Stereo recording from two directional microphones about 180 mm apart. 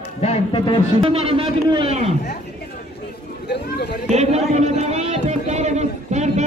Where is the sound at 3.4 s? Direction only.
65° left (ahead or behind).